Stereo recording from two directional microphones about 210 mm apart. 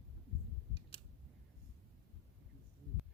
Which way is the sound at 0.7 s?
25° left (ahead or behind).